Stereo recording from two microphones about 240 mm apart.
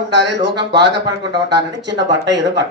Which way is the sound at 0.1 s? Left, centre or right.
Right.